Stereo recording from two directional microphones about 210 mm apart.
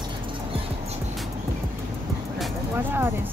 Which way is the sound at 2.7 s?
10° right (ahead or behind).